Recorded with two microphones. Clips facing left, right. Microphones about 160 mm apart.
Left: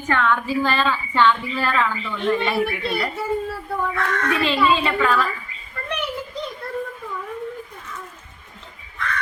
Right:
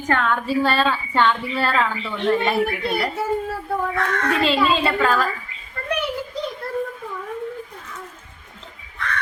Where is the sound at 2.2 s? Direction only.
45° right (ahead or behind).